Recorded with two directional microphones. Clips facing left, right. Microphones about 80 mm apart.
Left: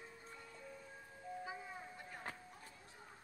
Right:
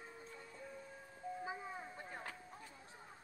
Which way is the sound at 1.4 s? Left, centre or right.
Right.